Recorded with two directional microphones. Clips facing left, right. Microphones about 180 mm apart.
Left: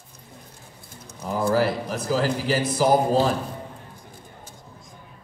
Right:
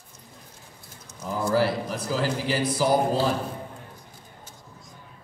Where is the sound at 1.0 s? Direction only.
55° left (ahead or behind).